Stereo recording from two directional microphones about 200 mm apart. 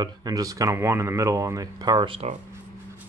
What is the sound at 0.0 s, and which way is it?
Speech, 20° right (ahead or behind).